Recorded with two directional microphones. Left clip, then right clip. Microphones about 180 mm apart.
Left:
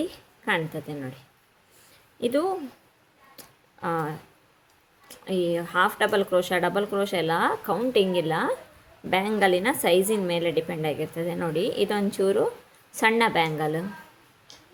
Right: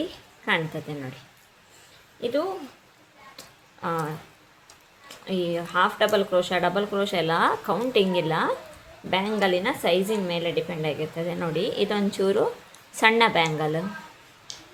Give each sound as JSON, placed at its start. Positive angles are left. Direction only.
{"t": 0.0, "sound": "a woman's voice", "side_deg": 20}
{"t": 2.2, "sound": "speech", "side_deg": 35}
{"t": 3.3, "sound": "a sound", "side_deg": 20}
{"t": 5.0, "sound": "speech", "side_deg": 20}
{"t": 9.0, "sound": "a woman's voice", "side_deg": 25}